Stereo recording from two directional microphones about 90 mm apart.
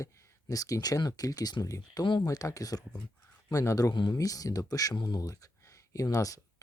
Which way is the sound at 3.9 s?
60° left (ahead or behind).